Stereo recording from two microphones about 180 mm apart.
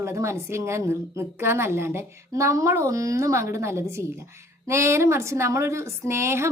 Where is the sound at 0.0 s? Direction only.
15° right (ahead or behind).